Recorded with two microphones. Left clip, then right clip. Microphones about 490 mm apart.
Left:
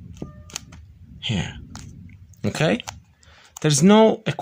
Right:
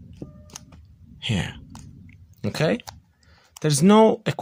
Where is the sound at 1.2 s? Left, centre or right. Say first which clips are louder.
Even; right.